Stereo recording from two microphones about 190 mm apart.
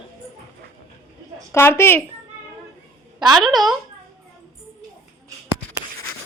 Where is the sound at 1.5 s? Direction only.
15° left (ahead or behind).